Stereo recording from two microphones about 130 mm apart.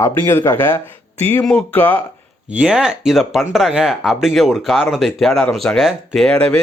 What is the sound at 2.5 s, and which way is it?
Speech, 5° right (ahead or behind).